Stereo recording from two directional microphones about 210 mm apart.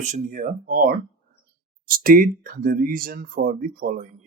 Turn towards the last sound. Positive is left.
turn(degrees=-40)  # may be behind; listen again after turning